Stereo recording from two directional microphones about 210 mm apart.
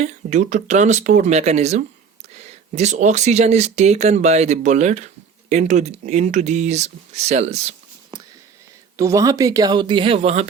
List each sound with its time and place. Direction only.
0.0 s speech: 35° right (ahead or behind)
9.0 s speech: 15° right (ahead or behind)